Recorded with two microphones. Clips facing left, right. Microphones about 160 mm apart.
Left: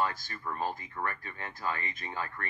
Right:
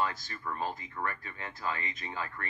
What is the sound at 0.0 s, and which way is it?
Speech, 45° left (ahead or behind).